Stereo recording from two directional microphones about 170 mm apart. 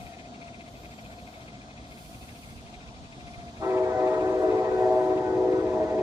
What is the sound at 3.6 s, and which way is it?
Train, 20° right (ahead or behind).